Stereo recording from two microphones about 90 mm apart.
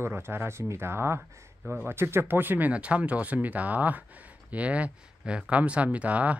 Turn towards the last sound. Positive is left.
turn(degrees=-15)  # may be behind; listen again after turning